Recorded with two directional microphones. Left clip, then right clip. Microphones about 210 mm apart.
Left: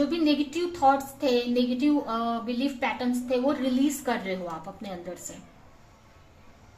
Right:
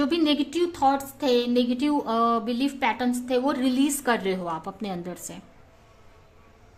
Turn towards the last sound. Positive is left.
turn(degrees=-45)  # may be behind; listen again after turning